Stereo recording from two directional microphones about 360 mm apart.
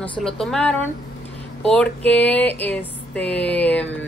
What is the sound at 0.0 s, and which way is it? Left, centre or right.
A woman's voice, centre.